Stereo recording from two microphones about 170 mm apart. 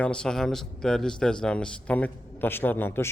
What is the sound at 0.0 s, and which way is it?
A man's voice, 5° left (ahead or behind).